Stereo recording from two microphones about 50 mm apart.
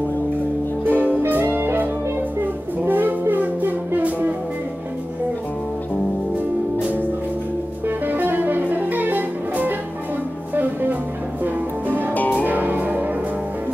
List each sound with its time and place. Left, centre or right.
0.8 s music: right
2.9 s music: right
8.1 s music: right
12.1 s music: left
12.4 s music: right